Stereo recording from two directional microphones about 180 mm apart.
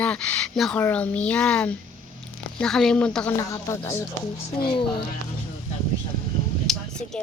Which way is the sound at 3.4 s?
15° left (ahead or behind).